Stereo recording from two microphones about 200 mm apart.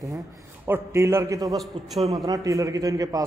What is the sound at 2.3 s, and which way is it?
Speech, 15° right (ahead or behind).